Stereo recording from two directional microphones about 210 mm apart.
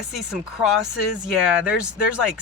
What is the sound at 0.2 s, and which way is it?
Speech, 5° right (ahead or behind).